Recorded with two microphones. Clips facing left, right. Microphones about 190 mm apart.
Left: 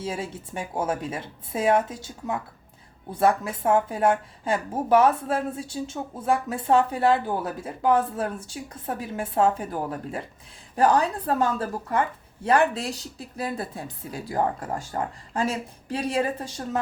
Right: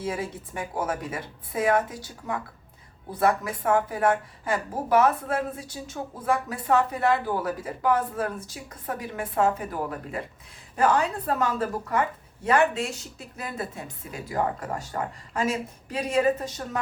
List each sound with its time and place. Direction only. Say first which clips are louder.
0.0 s a woman's voice: right 1 dB; 25° left (ahead or behind)